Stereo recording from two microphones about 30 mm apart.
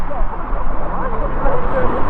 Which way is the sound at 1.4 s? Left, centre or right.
Centre.